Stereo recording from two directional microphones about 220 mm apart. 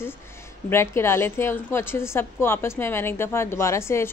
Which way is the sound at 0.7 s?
10° left (ahead or behind).